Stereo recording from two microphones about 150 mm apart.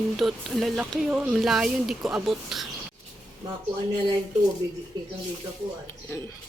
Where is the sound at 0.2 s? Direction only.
Centre (ahead or behind).